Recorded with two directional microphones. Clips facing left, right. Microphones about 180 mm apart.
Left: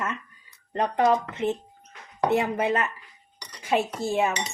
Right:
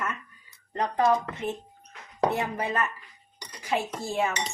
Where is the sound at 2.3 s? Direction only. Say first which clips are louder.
Left 5 dB; 25° left (ahead or behind).